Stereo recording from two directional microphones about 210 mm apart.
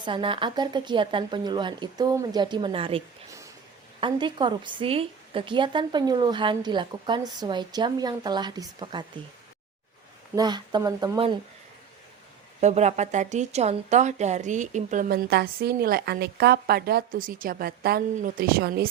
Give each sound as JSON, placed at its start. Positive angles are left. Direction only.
{"t": 0.0, "sound": "a woman's voice", "side_deg": -25}
{"t": 4.0, "sound": "a woman's voice", "side_deg": -20}
{"t": 10.3, "sound": "a woman's voice", "side_deg": -20}
{"t": 12.5, "sound": "a woman's voice", "side_deg": -30}